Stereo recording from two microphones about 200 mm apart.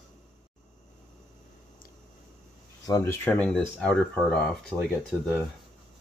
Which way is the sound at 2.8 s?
15° left (ahead or behind).